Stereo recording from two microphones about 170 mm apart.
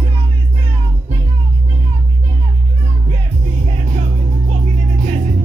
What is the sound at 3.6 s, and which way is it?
Music, 45° right (ahead or behind).